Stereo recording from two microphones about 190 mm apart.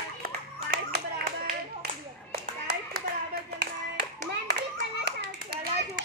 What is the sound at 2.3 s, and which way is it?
Clapping, 55° right (ahead or behind).